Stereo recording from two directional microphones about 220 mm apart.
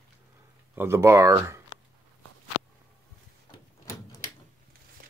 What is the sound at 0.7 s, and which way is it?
Speech, 10° right (ahead or behind).